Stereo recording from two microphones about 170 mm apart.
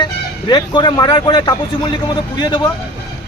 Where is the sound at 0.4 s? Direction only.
25° left (ahead or behind).